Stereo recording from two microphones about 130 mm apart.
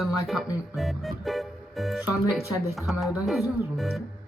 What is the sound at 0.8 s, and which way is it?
Music, centre (ahead or behind).